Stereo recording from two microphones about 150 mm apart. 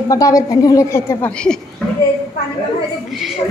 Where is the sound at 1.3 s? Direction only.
5° left (ahead or behind).